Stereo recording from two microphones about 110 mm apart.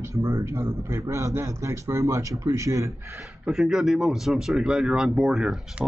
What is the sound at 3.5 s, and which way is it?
Speech, 5° right (ahead or behind).